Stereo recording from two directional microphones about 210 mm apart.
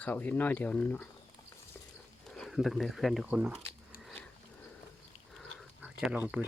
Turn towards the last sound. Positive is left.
turn(degrees=-10)  # may be behind; listen again after turning